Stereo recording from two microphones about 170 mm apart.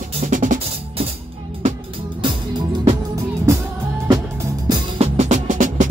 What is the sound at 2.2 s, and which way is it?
Music, 25° right (ahead or behind).